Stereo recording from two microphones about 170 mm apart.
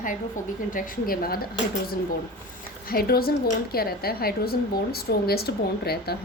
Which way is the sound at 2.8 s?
60° left (ahead or behind).